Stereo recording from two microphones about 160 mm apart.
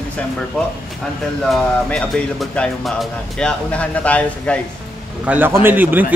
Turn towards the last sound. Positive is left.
turn(degrees=-10)  # may be behind; listen again after turning